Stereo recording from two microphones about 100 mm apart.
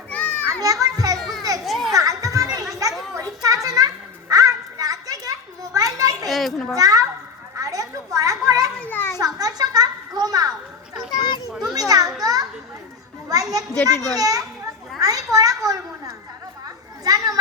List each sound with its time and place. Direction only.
0.1 s children playing: 15° left (ahead or behind)
0.6 s children playing: 35° right (ahead or behind)
1.6 s music: centre (ahead or behind)
1.9 s children playing: 35° right (ahead or behind)
3.2 s a sound: 35° right (ahead or behind)
6.2 s children playing: centre (ahead or behind)
6.7 s a sound: 35° right (ahead or behind)
8.8 s children playing: 20° left (ahead or behind)
9.1 s a sound: 40° right (ahead or behind)
11.7 s children playing: 40° right (ahead or behind)
17.0 s chatter: 40° right (ahead or behind)